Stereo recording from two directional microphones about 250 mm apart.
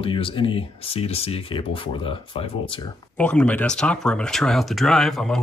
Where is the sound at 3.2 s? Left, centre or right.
Centre.